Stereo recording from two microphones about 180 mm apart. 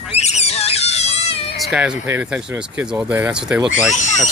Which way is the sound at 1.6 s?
5° right (ahead or behind).